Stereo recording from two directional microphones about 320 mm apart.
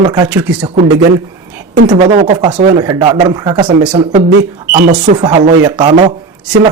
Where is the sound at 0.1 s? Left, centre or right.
Centre.